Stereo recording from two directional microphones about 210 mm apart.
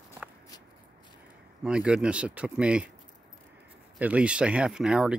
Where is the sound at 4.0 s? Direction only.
5° right (ahead or behind).